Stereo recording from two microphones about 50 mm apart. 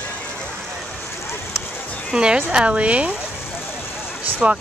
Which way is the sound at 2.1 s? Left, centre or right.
Centre.